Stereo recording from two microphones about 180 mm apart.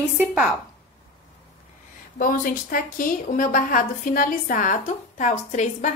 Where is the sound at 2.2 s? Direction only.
50° left (ahead or behind).